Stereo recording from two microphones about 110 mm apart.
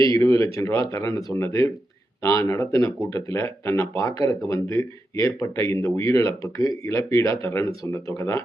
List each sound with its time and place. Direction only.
0.1 s speech: 30° left (ahead or behind)